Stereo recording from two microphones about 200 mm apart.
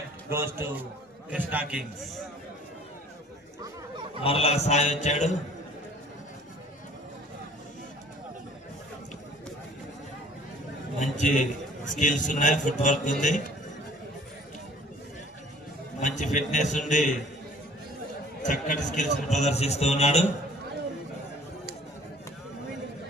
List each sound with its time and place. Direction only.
0.3 s a man's voice: 10° right (ahead or behind)
4.2 s a man's voice: 30° left (ahead or behind)
11.0 s a man's voice: 40° left (ahead or behind)
16.0 s a man's voice: 40° left (ahead or behind)
18.4 s a man's voice: 40° left (ahead or behind)